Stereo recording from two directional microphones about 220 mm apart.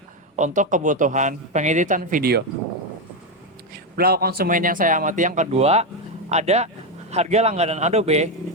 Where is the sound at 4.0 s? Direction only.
45° right (ahead or behind).